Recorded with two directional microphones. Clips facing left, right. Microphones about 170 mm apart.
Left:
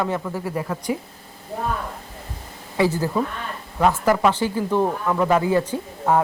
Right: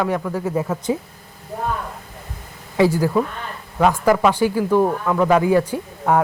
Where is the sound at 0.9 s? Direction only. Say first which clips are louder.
Right 3 dB; 25° right (ahead or behind).